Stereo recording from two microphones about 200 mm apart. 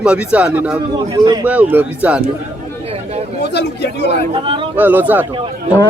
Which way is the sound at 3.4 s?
60° left (ahead or behind).